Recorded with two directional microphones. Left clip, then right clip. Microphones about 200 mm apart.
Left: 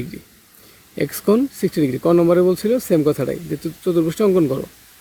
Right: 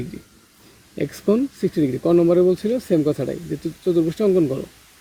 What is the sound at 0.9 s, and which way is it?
Speech, 20° left (ahead or behind).